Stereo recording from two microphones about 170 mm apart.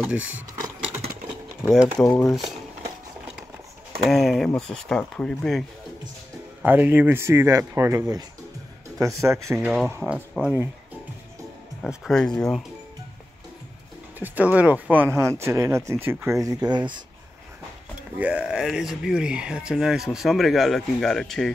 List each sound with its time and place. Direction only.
0.0 s speech: 10° right (ahead or behind)
1.6 s speech: centre (ahead or behind)
4.1 s speech: centre (ahead or behind)
6.6 s speech: 10° right (ahead or behind)
9.0 s speech: 15° right (ahead or behind)
11.8 s speech: centre (ahead or behind)
14.2 s speech: 10° right (ahead or behind); by 17.0 s 25° right (ahead or behind)
18.1 s speech: 5° right (ahead or behind)